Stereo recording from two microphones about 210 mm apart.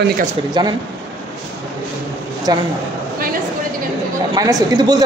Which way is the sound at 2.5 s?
20° right (ahead or behind).